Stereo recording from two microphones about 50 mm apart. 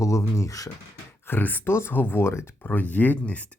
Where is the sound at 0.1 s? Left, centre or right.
Left.